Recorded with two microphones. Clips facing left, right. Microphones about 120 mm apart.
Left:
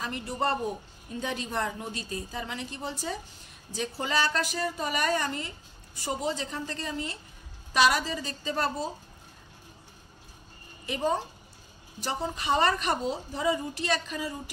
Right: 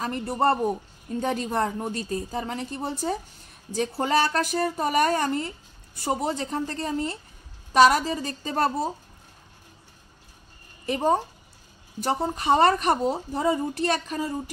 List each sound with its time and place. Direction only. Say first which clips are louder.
0.0 s speech: right 6 dB; 45° right (ahead or behind)
10.9 s speech: right 5 dB; 50° right (ahead or behind)